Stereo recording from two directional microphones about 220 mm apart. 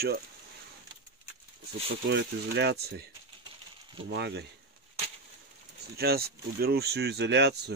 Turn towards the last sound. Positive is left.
turn(degrees=-50)  # may be behind; listen again after turning